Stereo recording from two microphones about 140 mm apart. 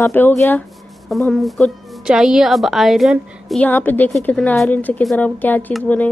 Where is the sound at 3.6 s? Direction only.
15° left (ahead or behind).